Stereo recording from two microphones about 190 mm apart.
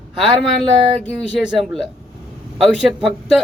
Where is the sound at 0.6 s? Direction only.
Centre (ahead or behind).